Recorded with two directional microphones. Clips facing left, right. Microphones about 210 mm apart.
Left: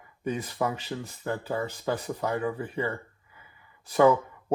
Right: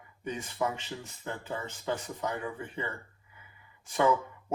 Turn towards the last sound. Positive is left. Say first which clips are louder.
# left 7 dB
turn(degrees=35)  # may be behind; listen again after turning